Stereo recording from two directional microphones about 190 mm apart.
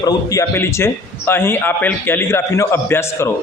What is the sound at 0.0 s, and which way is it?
A man's voice, 15° left (ahead or behind).